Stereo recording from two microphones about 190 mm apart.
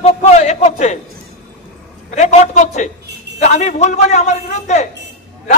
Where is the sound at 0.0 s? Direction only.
35° left (ahead or behind).